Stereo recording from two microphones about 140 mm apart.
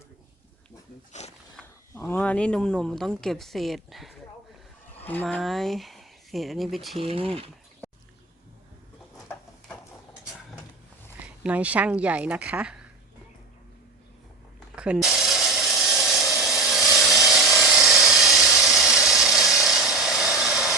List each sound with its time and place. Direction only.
1.2 s wild animals: 55° left (ahead or behind)
1.9 s speech: 15° left (ahead or behind); by 4.1 s centre (ahead or behind)
4.9 s speech: 15° left (ahead or behind)
7.0 s speech: 40° right (ahead or behind)
11.2 s speech: 10° right (ahead or behind)
14.8 s a sound: 5° right (ahead or behind)